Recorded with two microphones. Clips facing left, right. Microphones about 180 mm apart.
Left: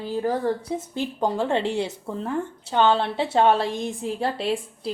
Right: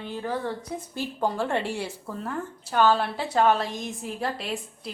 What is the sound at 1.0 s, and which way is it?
A woman's voice, 20° left (ahead or behind).